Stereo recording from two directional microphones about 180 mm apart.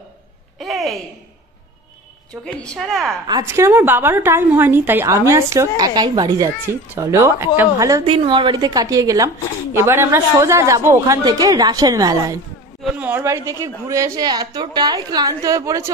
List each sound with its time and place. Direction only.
0.6 s a sound: centre (ahead or behind)
2.4 s a woman's voice: 5° left (ahead or behind)
3.3 s a woman's voice: 20° right (ahead or behind)